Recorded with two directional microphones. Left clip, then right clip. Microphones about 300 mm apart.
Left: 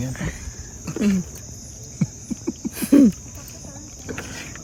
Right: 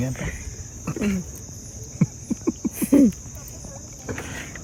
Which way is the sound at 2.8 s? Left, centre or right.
Left.